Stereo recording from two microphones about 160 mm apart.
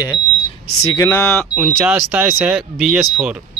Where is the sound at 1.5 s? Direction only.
5° right (ahead or behind).